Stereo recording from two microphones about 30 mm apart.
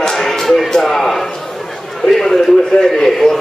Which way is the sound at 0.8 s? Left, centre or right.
Centre.